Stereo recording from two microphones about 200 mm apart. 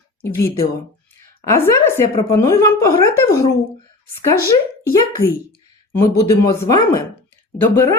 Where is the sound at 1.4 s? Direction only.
15° left (ahead or behind).